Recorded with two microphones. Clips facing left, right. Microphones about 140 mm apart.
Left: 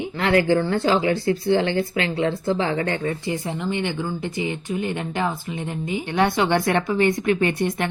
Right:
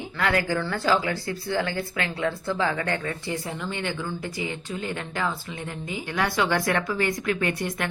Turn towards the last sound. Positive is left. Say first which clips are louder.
# left 5 dB
turn(degrees=25)  # may be behind; listen again after turning